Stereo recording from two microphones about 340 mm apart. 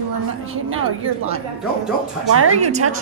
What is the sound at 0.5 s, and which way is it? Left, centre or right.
Speech, right.